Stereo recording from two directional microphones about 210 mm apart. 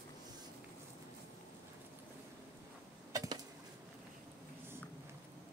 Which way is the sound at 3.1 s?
15° right (ahead or behind).